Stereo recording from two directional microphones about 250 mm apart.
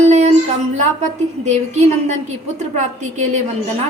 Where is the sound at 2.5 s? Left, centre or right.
Right.